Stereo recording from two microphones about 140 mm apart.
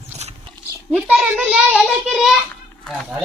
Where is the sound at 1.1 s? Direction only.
5° right (ahead or behind).